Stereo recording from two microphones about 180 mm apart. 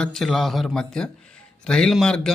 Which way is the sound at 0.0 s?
Centre (ahead or behind).